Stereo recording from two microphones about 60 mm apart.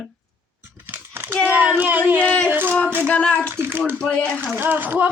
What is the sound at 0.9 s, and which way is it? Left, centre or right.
Crumpling, right.